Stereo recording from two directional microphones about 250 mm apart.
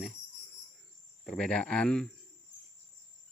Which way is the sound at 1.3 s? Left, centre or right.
Centre.